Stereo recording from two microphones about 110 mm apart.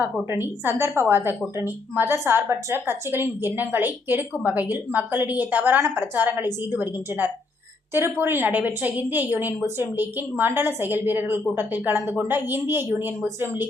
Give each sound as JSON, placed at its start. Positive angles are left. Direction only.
{"t": 0.0, "sound": "a woman's voice", "side_deg": -20}